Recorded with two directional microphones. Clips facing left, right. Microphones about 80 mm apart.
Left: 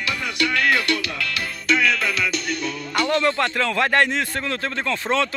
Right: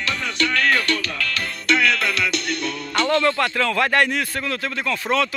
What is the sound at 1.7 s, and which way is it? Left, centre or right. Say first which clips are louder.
A man's voice: right 1 dB; centre.